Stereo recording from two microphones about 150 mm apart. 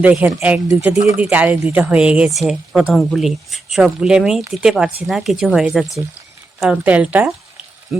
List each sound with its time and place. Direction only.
0.0 s speech: 10° right (ahead or behind)